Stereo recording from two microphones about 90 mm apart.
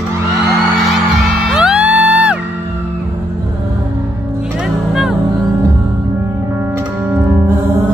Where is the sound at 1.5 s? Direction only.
10° right (ahead or behind).